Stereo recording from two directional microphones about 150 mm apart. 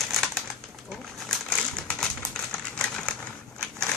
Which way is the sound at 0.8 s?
5° left (ahead or behind).